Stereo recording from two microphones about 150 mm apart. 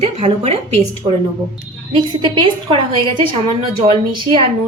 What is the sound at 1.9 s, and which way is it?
A woman's voice, 30° right (ahead or behind).